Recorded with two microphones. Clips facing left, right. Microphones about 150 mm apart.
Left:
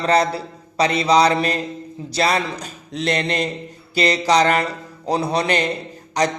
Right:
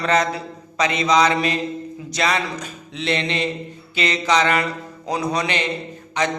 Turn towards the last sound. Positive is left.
turn(degrees=40)  # may be behind; listen again after turning